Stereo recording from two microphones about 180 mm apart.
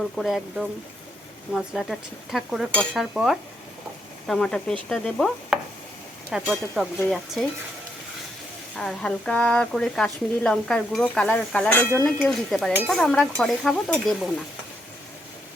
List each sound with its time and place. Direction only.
0.2 s speech: centre (ahead or behind)
8.7 s speech: 5° left (ahead or behind)